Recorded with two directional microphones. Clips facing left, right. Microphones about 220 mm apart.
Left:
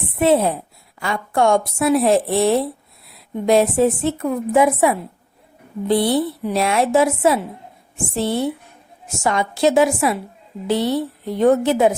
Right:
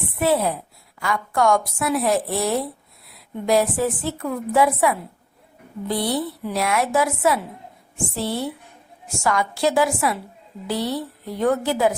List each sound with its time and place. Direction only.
0.0 s a woman's voice: 25° left (ahead or behind)